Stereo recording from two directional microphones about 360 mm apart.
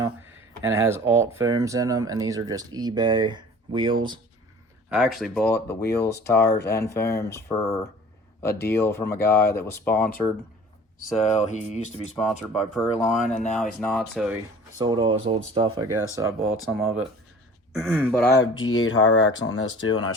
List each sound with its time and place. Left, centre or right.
0.6 s speech: centre
4.9 s speech: centre
5.5 s music: left
6.0 s speech: centre
6.5 s music: left
6.7 s speech: centre
11.3 s music: centre
12.1 s speech: centre
14.8 s speech: centre
17.7 s speech: centre
18.3 s speech: left